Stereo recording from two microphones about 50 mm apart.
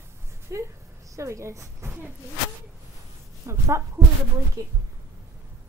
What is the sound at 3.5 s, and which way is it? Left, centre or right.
Speech, right.